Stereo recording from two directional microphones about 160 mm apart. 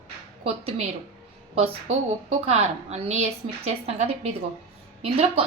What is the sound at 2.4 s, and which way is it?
A woman's voice, 40° right (ahead or behind).